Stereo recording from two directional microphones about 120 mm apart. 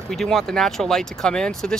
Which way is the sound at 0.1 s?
Centre (ahead or behind).